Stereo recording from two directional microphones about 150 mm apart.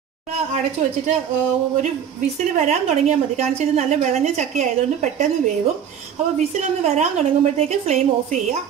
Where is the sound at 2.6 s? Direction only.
45° right (ahead or behind).